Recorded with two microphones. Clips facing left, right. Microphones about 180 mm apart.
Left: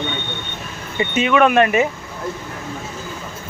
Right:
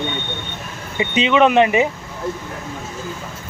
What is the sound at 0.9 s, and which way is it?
Speech, 20° right (ahead or behind).